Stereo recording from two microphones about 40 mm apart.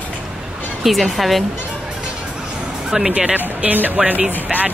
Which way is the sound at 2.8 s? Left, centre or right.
Centre.